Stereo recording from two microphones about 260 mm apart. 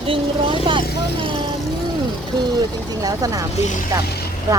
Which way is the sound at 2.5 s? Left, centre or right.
Centre.